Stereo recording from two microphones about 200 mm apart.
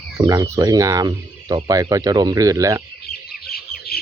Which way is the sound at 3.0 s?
50° left (ahead or behind).